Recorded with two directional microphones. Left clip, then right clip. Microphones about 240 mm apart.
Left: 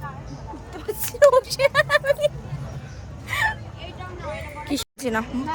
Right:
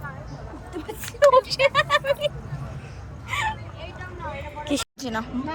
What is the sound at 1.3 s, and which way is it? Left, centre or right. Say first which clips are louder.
Vehicle: even; left.